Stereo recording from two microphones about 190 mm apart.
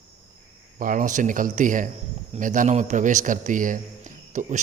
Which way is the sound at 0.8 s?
45° right (ahead or behind).